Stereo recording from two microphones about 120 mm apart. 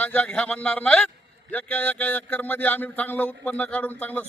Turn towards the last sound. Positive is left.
turn(degrees=15)  # may be behind; listen again after turning